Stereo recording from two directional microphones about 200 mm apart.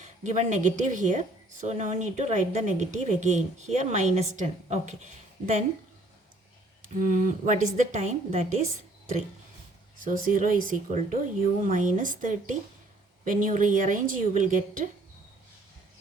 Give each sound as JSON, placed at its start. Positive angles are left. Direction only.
{"t": 0.0, "sound": "speech", "side_deg": -35}
{"t": 7.0, "sound": "speech", "side_deg": -40}